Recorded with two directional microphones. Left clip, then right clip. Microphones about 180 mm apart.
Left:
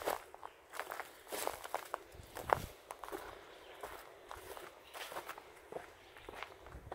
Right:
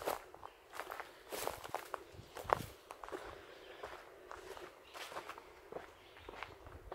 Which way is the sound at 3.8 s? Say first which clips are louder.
Left 2 dB; 60° left (ahead or behind).